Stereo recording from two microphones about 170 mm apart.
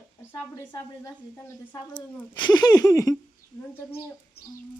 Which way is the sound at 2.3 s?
25° left (ahead or behind).